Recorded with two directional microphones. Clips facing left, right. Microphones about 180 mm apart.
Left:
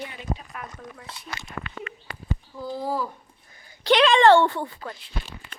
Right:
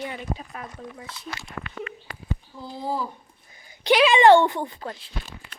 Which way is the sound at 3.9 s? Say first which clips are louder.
Right 1 dB; 5° right (ahead or behind).